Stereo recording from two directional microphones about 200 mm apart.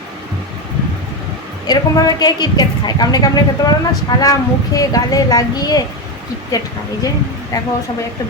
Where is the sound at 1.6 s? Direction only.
20° left (ahead or behind).